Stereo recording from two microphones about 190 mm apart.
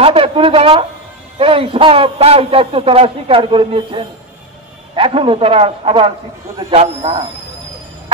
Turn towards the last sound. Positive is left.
turn(degrees=-30)  # may be behind; listen again after turning